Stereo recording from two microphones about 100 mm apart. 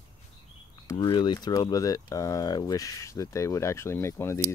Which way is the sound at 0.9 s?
50° left (ahead or behind).